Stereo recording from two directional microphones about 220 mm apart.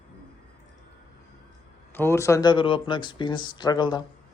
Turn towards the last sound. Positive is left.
turn(degrees=20)  # may be behind; listen again after turning